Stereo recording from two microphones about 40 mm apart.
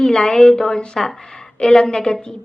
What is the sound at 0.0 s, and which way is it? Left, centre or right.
Speech, centre.